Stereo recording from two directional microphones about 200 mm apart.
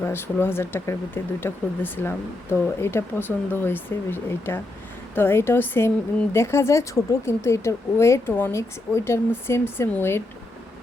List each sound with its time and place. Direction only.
0.0 s speech: 10° left (ahead or behind)